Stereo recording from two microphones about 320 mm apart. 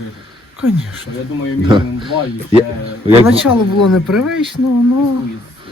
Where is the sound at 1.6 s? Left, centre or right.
Centre.